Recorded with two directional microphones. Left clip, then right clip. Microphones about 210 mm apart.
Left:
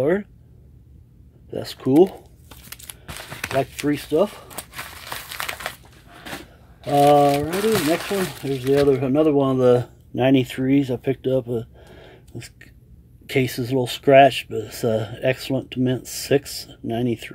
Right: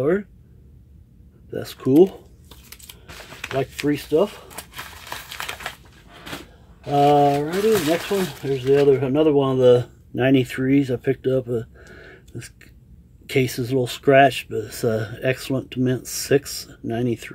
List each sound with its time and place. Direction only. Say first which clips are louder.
0.0 s speech: even; 5° left (ahead or behind)
1.5 s speech: right 1 dB; 5° left (ahead or behind)
3.3 s a sound: left 2 dB; 45° left (ahead or behind)
3.7 s speech: right 1 dB; 10° left (ahead or behind)
4.6 s crumpling: left 1 dB; 25° left (ahead or behind)
6.9 s speech: left 1 dB; 10° left (ahead or behind)